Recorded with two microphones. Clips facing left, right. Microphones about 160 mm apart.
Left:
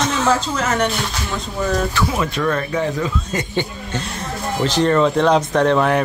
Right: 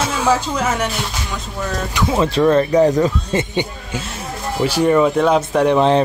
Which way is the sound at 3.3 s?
15° right (ahead or behind).